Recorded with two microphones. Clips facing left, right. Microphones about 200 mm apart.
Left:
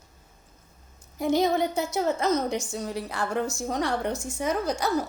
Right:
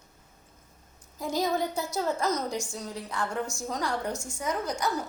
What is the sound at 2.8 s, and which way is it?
Speech, 75° left (ahead or behind).